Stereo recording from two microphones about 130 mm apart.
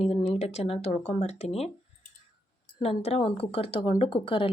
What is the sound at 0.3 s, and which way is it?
Speech, 55° left (ahead or behind).